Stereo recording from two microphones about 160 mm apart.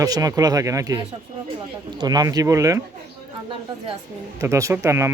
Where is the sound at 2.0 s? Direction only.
25° right (ahead or behind).